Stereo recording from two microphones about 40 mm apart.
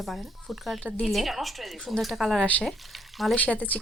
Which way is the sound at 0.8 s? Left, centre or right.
Left.